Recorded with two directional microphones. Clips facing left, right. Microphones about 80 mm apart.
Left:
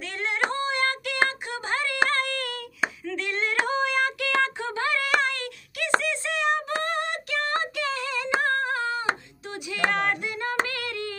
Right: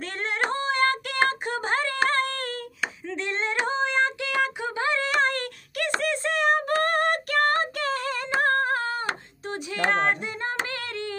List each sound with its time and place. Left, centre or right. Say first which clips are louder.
0.0 s singing: even; right
0.5 s female singing: right 2 dB; right
1.5 s a sound: right 2 dB; right
3.1 s female singing: even; right
4.4 s a sound: right 1 dB; centre
5.2 s a sound: right 3 dB; right
8.4 s humming: right 3 dB; right
9.8 s female singing: right 2 dB; right
10.7 s singing: even; right